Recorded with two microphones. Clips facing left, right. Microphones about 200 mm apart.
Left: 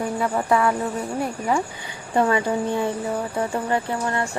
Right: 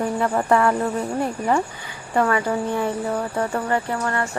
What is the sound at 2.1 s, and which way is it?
Speech, 20° left (ahead or behind).